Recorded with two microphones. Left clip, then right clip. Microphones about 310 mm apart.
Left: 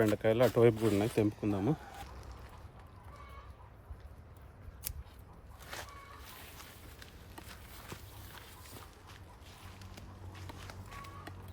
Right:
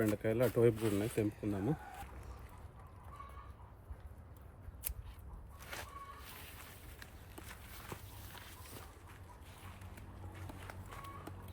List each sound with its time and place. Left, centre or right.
0.0 s speech: centre
0.9 s speech: left
5.6 s a sound: centre
10.4 s run: centre